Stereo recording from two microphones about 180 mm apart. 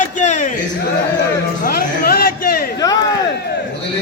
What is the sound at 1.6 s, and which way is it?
A man's voice, 55° left (ahead or behind).